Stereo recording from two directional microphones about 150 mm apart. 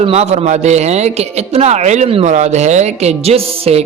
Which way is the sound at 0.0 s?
45° right (ahead or behind).